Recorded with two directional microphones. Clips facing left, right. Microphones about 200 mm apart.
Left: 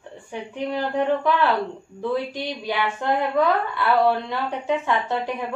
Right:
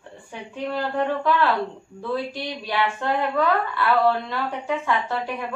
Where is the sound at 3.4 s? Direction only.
15° left (ahead or behind).